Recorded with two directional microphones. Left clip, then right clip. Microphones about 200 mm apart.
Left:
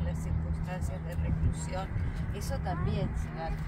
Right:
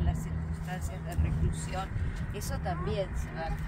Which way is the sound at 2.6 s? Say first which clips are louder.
Right 4 dB; 20° right (ahead or behind).